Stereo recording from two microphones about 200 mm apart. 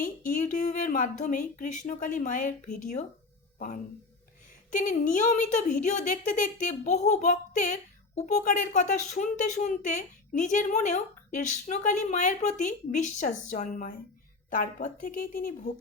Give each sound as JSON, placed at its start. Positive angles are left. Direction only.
{"t": 0.0, "sound": "a woman's voice", "side_deg": 45}
{"t": 4.7, "sound": "a woman's voice", "side_deg": 40}